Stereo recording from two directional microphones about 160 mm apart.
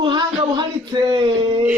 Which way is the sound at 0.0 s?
30° right (ahead or behind).